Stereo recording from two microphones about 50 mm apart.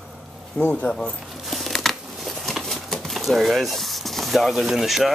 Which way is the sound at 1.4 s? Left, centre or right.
Centre.